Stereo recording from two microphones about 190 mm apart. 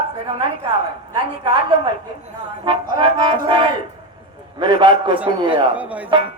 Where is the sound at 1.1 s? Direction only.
25° right (ahead or behind).